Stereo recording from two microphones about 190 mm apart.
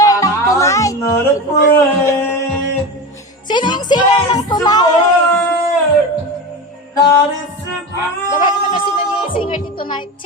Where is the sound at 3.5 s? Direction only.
25° left (ahead or behind).